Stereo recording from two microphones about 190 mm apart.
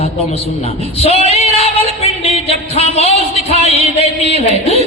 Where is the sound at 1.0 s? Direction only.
30° left (ahead or behind).